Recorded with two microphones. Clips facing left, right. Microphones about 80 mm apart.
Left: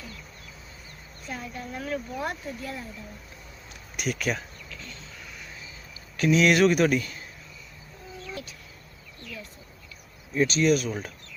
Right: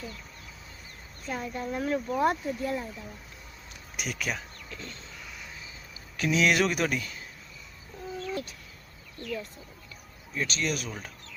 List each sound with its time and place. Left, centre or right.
1.3 s a woman's voice: right
3.9 s speech: centre
4.7 s a sound: right
6.1 s speech: centre
9.2 s speech: right
10.3 s speech: centre